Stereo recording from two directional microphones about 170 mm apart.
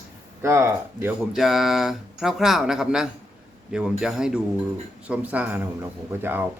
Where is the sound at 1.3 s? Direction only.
Centre (ahead or behind).